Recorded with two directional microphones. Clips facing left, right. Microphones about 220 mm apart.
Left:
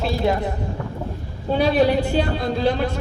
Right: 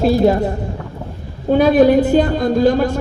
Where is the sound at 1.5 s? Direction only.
50° right (ahead or behind).